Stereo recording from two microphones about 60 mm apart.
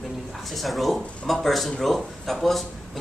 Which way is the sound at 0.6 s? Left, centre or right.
Centre.